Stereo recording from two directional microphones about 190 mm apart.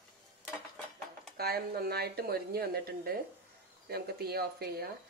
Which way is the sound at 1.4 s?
55° right (ahead or behind).